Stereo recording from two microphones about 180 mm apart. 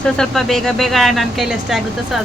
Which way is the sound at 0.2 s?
Centre (ahead or behind).